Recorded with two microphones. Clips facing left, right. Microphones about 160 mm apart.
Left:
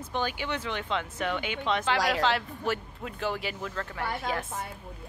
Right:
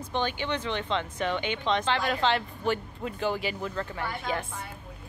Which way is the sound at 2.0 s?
85° left.